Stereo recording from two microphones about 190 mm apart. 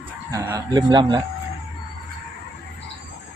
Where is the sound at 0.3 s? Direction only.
15° right (ahead or behind).